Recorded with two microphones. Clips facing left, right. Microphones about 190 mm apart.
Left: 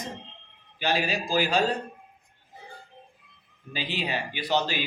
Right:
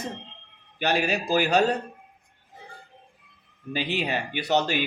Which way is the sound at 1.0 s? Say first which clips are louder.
Right 4 dB; 45° right (ahead or behind).